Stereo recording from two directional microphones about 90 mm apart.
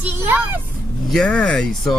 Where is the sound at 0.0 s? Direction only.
20° right (ahead or behind).